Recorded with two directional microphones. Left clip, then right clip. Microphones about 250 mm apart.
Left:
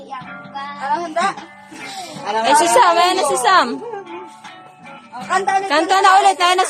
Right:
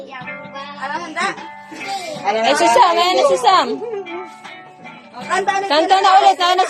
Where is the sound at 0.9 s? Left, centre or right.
Centre.